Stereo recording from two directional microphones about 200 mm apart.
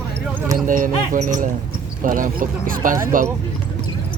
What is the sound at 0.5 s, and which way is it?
Speech, 40° right (ahead or behind).